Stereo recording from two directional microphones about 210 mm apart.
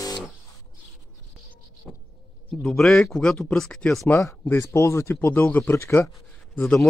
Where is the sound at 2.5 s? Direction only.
5° left (ahead or behind).